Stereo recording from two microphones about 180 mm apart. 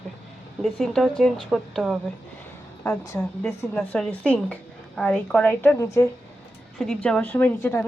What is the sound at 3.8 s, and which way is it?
Speech, centre (ahead or behind).